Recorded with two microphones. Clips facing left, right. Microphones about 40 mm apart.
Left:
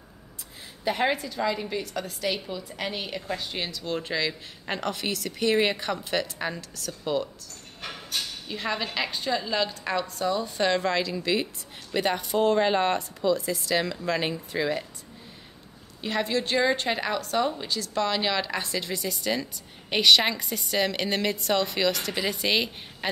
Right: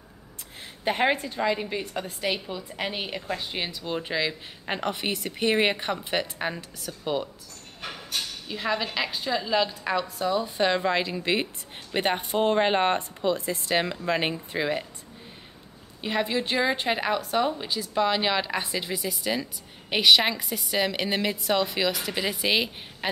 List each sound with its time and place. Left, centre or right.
1.0 s a woman's voice: right
1.4 s a woman's voice: right
7.8 s a woman's voice: centre; by 14.9 s right
16.0 s a woman's voice: centre